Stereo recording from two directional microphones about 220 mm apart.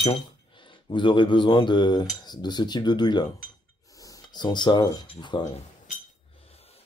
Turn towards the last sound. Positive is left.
turn(degrees=20)  # may be behind; listen again after turning